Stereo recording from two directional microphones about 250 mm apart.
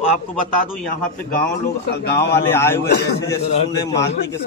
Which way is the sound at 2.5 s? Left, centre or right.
Centre.